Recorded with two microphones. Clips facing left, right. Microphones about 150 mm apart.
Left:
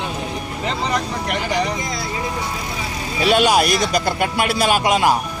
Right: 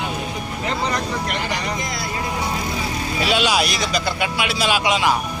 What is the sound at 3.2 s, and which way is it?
Speech, 50° left (ahead or behind).